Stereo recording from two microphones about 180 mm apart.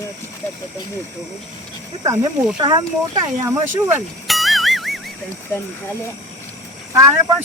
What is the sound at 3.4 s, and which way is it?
Speech, 15° right (ahead or behind).